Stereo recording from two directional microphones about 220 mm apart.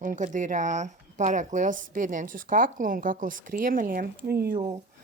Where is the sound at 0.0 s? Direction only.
35° right (ahead or behind).